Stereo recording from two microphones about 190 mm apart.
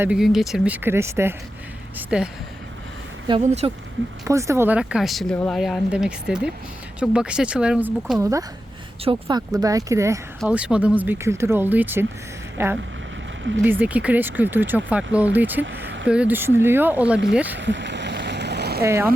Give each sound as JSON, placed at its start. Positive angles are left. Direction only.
{"t": 0.0, "sound": "speech", "side_deg": -5}
{"t": 3.4, "sound": "speech", "side_deg": -35}
{"t": 4.3, "sound": "speech", "side_deg": -15}
{"t": 8.2, "sound": "speech", "side_deg": -15}
{"t": 15.6, "sound": "vehicle", "side_deg": -65}
{"t": 16.0, "sound": "speech", "side_deg": -5}
{"t": 17.6, "sound": "boat", "side_deg": -70}
{"t": 18.8, "sound": "speech", "side_deg": -15}